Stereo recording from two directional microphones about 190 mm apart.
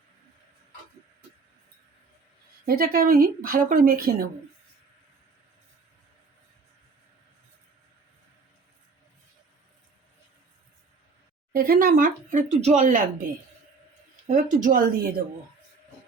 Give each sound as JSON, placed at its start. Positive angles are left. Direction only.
{"t": 2.6, "sound": "speech", "side_deg": -50}
{"t": 11.5, "sound": "speech", "side_deg": -50}
{"t": 14.3, "sound": "speech", "side_deg": -40}